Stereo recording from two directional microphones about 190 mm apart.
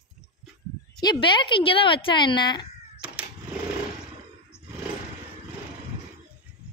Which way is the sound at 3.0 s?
5° right (ahead or behind).